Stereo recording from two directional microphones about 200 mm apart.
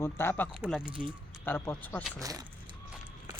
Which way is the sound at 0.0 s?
10° left (ahead or behind).